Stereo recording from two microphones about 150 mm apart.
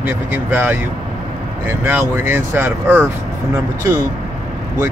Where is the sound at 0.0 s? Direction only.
15° right (ahead or behind).